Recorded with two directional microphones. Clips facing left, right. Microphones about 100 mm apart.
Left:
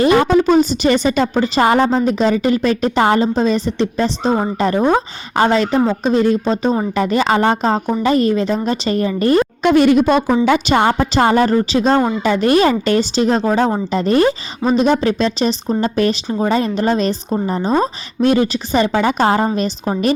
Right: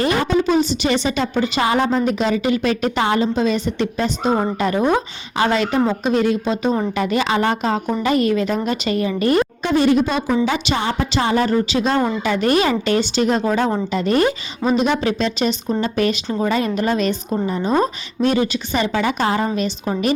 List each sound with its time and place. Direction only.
0.1 s a woman's voice: 65° left (ahead or behind); by 9.4 s 35° left (ahead or behind)
9.6 s speech: 75° left (ahead or behind)
10.1 s a woman's voice: 55° left (ahead or behind)